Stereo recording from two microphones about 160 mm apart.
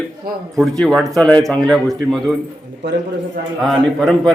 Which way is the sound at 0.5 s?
Centre (ahead or behind).